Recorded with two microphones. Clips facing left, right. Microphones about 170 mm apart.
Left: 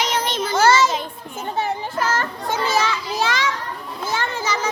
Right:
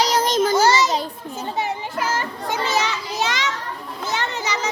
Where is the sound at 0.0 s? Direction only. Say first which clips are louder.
Right 5 dB; 35° right (ahead or behind).